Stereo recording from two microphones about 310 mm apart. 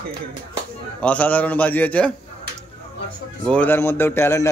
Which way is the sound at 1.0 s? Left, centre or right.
Centre.